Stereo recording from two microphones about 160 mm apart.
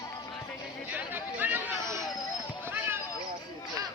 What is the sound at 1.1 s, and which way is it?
Chatter, 10° right (ahead or behind).